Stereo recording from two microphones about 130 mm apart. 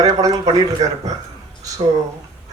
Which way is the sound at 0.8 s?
65° right (ahead or behind).